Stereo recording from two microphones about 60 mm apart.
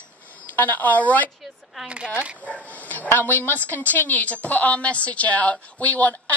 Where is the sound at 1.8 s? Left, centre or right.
Centre.